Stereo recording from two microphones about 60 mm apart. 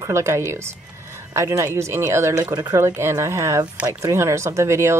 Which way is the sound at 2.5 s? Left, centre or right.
Right.